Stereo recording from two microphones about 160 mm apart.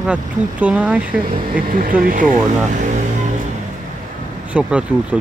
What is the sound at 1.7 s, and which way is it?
Speech, 60° right (ahead or behind).